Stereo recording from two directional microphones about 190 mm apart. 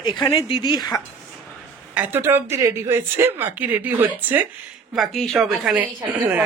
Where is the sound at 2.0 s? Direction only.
10° right (ahead or behind).